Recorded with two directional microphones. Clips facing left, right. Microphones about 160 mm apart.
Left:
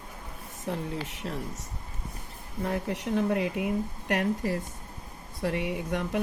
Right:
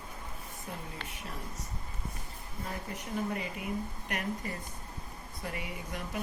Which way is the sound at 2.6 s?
80° left.